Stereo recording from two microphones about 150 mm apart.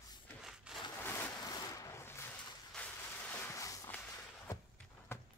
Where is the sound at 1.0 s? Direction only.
15° left (ahead or behind).